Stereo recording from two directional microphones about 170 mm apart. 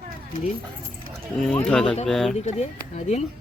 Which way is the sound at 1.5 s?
5° left (ahead or behind).